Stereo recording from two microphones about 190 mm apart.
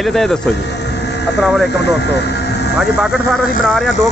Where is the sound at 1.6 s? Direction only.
60° left (ahead or behind).